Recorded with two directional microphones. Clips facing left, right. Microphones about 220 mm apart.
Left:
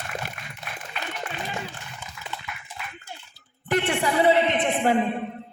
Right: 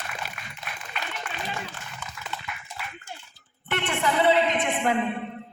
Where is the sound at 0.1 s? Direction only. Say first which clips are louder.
Left 4 dB; 50° left (ahead or behind).